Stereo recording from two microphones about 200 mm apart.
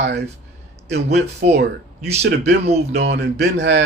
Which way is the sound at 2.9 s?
55° right (ahead or behind).